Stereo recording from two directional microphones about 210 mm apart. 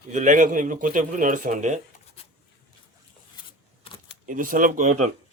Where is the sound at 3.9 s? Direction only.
25° left (ahead or behind).